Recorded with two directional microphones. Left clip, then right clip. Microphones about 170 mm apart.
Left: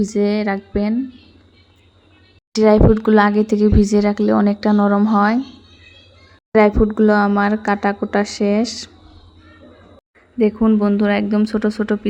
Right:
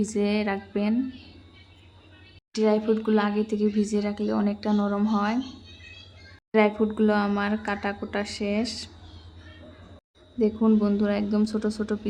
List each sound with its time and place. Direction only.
0.0 s speech: 30° left (ahead or behind)
2.5 s speech: 45° left (ahead or behind)
6.5 s speech: 30° left (ahead or behind)
10.3 s speech: 25° left (ahead or behind)